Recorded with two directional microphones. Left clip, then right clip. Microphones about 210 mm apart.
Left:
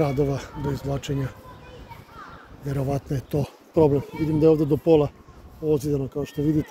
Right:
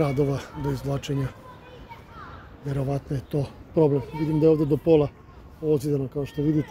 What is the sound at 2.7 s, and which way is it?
A man's voice, 15° left (ahead or behind).